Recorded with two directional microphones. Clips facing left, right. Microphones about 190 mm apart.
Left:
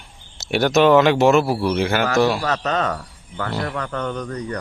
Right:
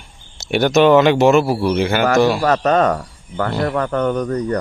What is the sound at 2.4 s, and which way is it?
A man's voice, 50° right (ahead or behind).